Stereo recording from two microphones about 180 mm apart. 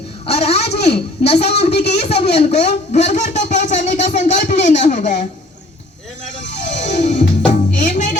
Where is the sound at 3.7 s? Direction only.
40° left (ahead or behind).